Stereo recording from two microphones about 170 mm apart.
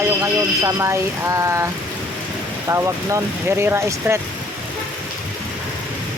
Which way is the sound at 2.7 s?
15° right (ahead or behind).